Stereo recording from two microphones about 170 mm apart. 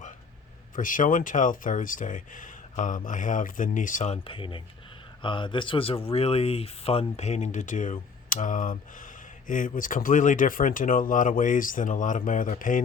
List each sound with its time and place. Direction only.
0.8 s speech: 50° left (ahead or behind)